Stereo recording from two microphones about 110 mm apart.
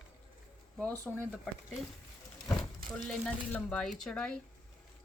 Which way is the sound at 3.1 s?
15° left (ahead or behind).